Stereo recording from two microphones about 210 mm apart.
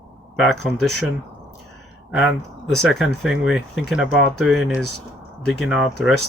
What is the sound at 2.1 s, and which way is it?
Speech, 5° right (ahead or behind).